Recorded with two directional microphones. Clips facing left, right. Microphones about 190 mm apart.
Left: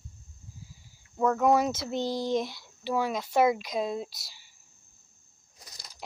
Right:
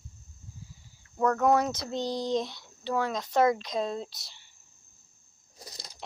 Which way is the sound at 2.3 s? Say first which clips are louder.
Left 1 dB; 5° left (ahead or behind).